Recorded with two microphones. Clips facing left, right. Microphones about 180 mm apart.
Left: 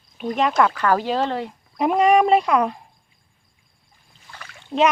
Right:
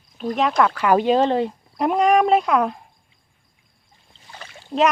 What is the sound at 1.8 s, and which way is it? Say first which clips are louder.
Speech: left 1 dB; centre (ahead or behind).